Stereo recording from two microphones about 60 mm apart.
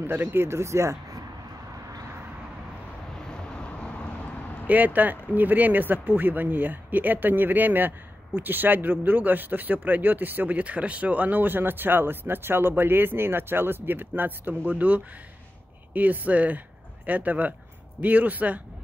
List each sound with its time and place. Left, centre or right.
0.0 s speech: right
3.5 s vehicle: centre
4.6 s speech: right